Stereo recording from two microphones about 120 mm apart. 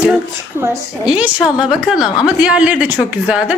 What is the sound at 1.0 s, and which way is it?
Speech, 10° right (ahead or behind).